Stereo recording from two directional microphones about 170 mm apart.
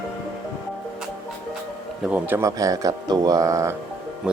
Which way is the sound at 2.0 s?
10° right (ahead or behind).